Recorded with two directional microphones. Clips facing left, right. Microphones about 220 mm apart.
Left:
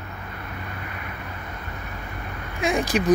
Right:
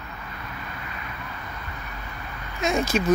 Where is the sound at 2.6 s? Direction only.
15° left (ahead or behind).